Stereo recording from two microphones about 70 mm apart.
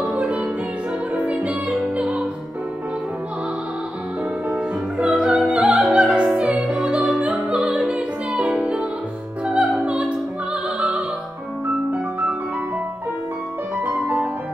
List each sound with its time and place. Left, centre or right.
0.1 s music: centre
4.9 s music: centre
5.5 s opera: centre
10.8 s music: centre
13.8 s music: right